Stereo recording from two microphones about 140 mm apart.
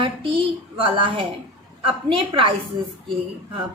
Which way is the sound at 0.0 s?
35° right (ahead or behind).